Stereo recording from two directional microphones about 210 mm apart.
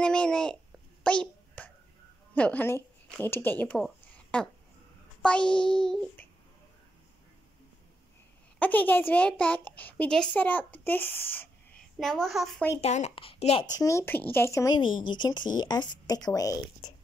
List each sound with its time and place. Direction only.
0.0 s a child's voice: 5° left (ahead or behind)
1.0 s a sound: 5° left (ahead or behind)
2.3 s a child's voice: 5° left (ahead or behind)
8.5 s a child's voice: 10° left (ahead or behind)
12.8 s speech: 30° left (ahead or behind)
13.7 s speech: 15° left (ahead or behind)